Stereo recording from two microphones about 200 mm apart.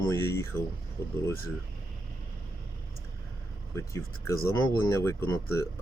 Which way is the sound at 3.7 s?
15° left (ahead or behind).